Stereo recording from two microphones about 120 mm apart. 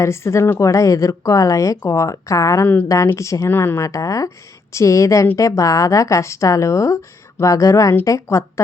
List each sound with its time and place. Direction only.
0.0 s speech: 25° left (ahead or behind)